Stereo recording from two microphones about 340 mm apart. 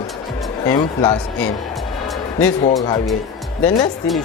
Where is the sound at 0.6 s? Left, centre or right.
Centre.